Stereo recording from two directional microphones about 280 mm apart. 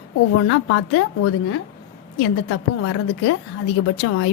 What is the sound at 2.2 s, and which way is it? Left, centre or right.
A woman's voice, left.